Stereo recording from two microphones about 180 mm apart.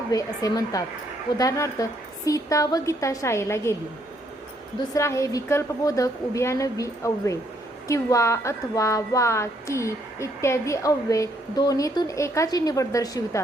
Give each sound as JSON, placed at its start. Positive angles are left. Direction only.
{"t": 0.1, "sound": "a woman's voice", "side_deg": 20}
{"t": 4.9, "sound": "a woman's voice", "side_deg": 15}